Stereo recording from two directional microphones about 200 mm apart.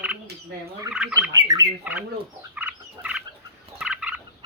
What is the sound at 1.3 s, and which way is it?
Turkey, 20° right (ahead or behind).